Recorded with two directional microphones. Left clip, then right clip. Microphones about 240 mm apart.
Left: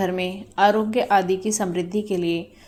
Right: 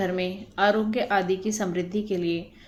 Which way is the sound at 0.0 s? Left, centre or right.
Centre.